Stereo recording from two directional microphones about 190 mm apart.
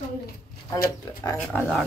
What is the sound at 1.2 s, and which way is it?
Speech, 15° left (ahead or behind).